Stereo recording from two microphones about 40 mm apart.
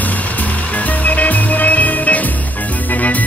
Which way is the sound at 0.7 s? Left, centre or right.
Left.